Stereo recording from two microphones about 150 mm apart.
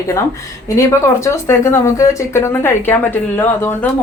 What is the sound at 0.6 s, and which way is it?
Speech, 20° left (ahead or behind).